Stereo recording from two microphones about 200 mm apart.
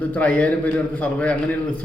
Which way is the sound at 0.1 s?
5° left (ahead or behind).